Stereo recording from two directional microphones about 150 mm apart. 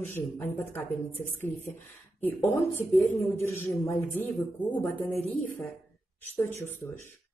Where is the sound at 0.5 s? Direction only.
15° left (ahead or behind).